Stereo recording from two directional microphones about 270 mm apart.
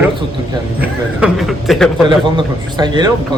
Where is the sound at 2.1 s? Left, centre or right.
Centre.